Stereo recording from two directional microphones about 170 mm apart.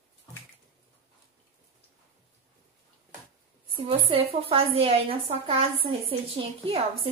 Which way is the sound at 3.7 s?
35° right (ahead or behind).